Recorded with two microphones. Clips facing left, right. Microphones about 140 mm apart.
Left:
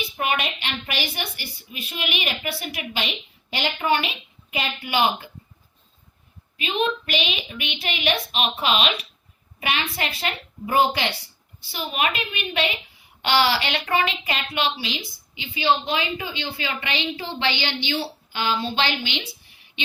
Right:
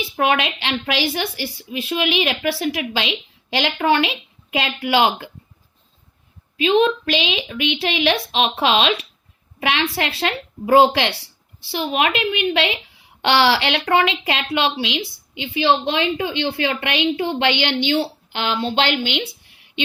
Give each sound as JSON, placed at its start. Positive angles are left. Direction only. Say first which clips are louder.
{"t": 0.2, "sound": "a woman's voice", "louder": "right 7 dB", "side_deg": -90}
{"t": 6.6, "sound": "a woman's voice", "louder": "right 8 dB", "side_deg": -90}
{"t": 9.6, "sound": "a woman's voice", "louder": "right 5 dB", "side_deg": -75}
{"t": 9.9, "sound": "a woman's voice", "louder": "right 6 dB", "side_deg": -90}
{"t": 11.7, "sound": "a woman's voice", "louder": "right 6 dB", "side_deg": -90}
{"t": 13.2, "sound": "speech", "louder": "right 4 dB", "side_deg": -90}